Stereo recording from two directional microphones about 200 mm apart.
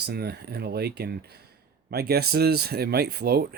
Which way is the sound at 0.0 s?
55° right (ahead or behind).